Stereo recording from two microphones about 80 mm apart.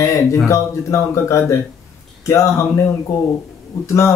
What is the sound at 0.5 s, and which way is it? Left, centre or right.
Speech, left.